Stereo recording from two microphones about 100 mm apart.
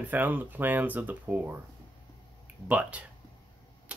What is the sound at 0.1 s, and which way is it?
Speech, 20° right (ahead or behind).